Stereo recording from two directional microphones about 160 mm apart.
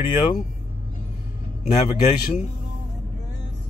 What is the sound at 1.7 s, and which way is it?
Speech, 45° left (ahead or behind).